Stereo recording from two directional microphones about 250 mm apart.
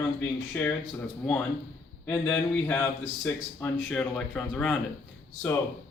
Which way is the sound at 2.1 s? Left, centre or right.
Centre.